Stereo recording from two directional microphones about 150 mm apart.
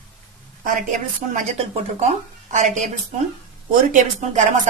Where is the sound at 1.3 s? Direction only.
50° right (ahead or behind).